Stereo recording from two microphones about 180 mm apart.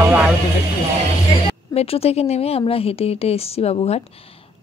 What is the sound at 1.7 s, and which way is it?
Speech, 35° left (ahead or behind).